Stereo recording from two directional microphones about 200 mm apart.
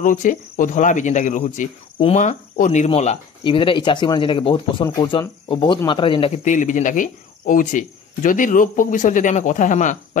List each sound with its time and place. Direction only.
0.0 s speech: 40° left (ahead or behind)